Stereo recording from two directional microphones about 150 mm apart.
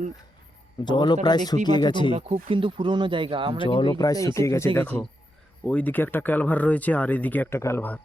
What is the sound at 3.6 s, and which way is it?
Speech, 35° left (ahead or behind).